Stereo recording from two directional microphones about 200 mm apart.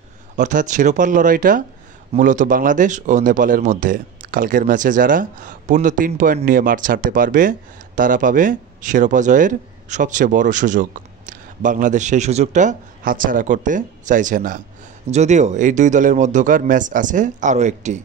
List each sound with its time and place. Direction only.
0.4 s speech: 40° right (ahead or behind)